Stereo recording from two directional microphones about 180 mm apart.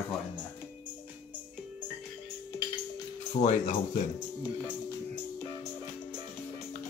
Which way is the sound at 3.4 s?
40° left (ahead or behind).